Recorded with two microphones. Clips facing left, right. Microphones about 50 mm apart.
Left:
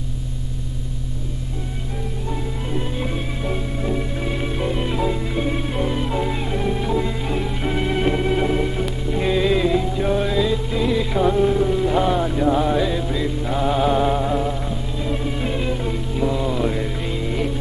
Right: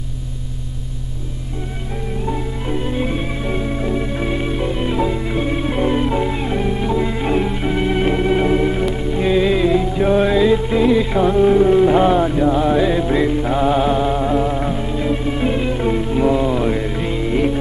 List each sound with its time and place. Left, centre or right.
2.8 s music: right
4.4 s music: centre
7.6 s organ: centre
8.5 s music: right
8.8 s music: centre
12.7 s music: right
13.5 s music: centre
13.9 s music: centre
14.4 s music: right